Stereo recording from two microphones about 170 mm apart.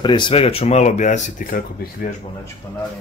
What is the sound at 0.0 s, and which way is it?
Speech, 25° left (ahead or behind).